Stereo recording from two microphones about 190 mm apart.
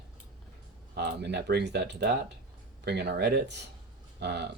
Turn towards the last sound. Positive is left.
turn(degrees=-65)  # may be behind; listen again after turning